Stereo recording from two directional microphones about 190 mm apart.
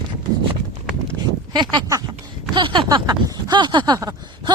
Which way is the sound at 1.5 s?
20° right (ahead or behind).